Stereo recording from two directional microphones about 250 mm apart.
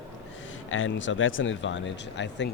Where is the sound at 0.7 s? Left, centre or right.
Left.